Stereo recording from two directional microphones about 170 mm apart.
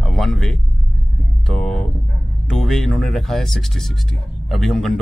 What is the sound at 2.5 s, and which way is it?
Speech, centre (ahead or behind).